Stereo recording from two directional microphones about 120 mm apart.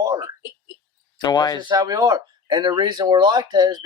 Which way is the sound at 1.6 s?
35° right (ahead or behind).